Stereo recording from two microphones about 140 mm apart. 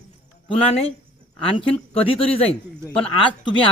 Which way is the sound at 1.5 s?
40° left (ahead or behind).